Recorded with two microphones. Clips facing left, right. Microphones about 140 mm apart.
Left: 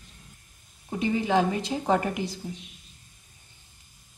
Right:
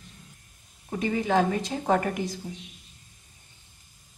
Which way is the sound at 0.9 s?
20° left (ahead or behind).